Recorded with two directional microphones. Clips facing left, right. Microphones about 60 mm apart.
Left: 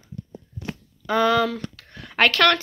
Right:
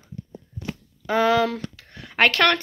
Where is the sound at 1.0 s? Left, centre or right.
Centre.